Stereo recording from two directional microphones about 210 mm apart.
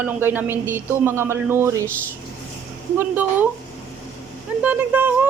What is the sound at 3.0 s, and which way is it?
Speech, 10° right (ahead or behind).